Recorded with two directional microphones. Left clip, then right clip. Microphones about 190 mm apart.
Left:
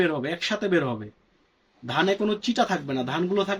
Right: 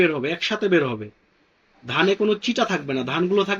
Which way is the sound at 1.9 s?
20° left (ahead or behind).